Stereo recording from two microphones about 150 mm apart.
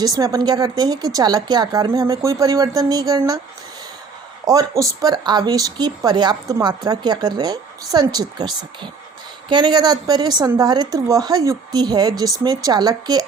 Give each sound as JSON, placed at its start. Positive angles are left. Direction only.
{"t": 0.0, "sound": "speech", "side_deg": -25}
{"t": 4.4, "sound": "speech", "side_deg": -25}